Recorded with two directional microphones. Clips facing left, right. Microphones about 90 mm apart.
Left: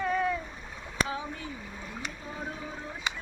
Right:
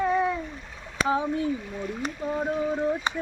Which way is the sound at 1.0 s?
35° right (ahead or behind).